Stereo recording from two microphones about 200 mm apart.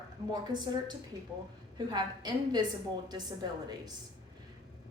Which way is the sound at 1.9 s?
20° right (ahead or behind).